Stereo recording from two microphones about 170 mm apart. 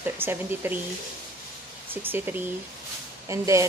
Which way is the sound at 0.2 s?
10° right (ahead or behind).